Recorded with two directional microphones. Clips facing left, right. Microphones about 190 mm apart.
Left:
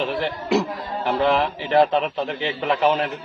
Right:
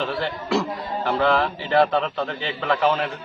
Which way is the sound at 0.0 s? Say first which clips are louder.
Left 2 dB; 15° left (ahead or behind).